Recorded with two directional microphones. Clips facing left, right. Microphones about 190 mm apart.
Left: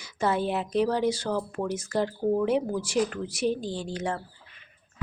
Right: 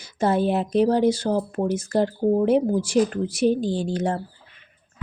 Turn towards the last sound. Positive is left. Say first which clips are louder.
# right 7 dB
turn(degrees=-40)  # may be behind; listen again after turning